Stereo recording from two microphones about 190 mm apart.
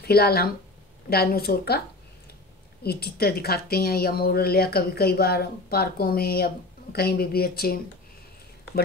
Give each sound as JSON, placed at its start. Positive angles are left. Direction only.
{"t": 0.0, "sound": "a woman's voice", "side_deg": 55}
{"t": 2.8, "sound": "a woman's voice", "side_deg": 55}